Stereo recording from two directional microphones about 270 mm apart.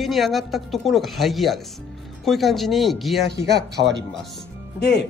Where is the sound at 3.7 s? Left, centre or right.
Right.